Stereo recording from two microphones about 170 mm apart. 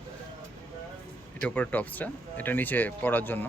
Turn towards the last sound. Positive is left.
turn(degrees=10)  # may be behind; listen again after turning